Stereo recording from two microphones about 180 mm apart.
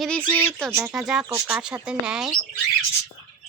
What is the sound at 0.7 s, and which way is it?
Speech, 5° right (ahead or behind).